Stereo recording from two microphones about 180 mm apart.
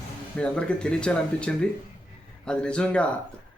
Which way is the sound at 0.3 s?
5° left (ahead or behind).